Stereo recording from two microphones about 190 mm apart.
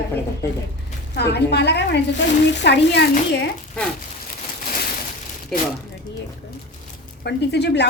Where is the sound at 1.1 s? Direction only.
60° left (ahead or behind).